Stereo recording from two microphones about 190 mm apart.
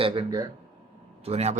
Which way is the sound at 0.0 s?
25° right (ahead or behind).